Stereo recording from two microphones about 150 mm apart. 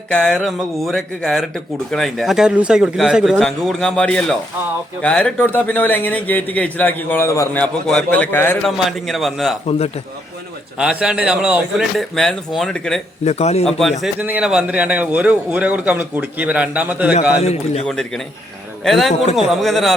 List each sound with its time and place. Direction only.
0.1 s a man's voice: 5° left (ahead or behind)
8.6 s speech: centre (ahead or behind)
9.6 s a man's voice: 45° left (ahead or behind)
10.8 s speech: 5° right (ahead or behind)
13.2 s a man's voice: 45° left (ahead or behind)
13.7 s speech: centre (ahead or behind)
14.0 s a man's voice: 10° right (ahead or behind)
17.4 s a man's voice: 45° left (ahead or behind)
17.8 s a man's voice: 5° left (ahead or behind)
19.2 s a man's voice: 45° left (ahead or behind)
19.6 s speech: centre (ahead or behind)